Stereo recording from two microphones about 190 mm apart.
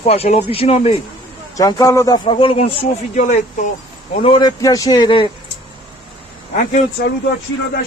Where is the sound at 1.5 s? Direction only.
20° left (ahead or behind); by 3.6 s 40° left (ahead or behind).